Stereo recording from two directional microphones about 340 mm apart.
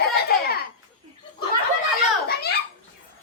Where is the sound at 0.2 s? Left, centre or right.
Left.